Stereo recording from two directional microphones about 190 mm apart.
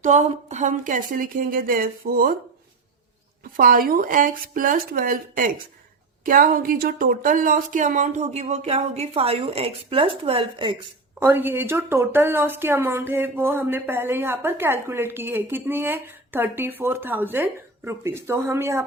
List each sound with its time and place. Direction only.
0.0 s speech: 40° right (ahead or behind)
3.6 s a woman's voice: 50° right (ahead or behind); by 10.8 s 25° right (ahead or behind)
11.2 s a woman's voice: 10° right (ahead or behind)